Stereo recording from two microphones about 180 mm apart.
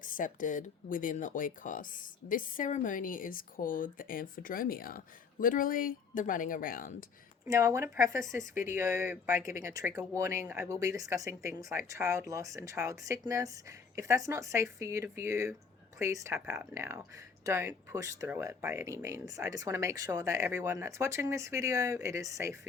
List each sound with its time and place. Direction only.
0.0 s speech: 50° left (ahead or behind)
7.4 s speech: 20° right (ahead or behind)